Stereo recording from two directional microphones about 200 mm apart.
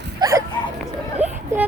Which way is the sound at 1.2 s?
35° right (ahead or behind).